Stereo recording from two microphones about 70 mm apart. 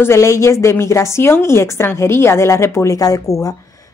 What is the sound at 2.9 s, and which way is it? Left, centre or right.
Speech, left.